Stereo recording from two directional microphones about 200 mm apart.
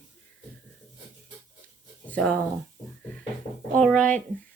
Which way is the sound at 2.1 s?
5° left (ahead or behind).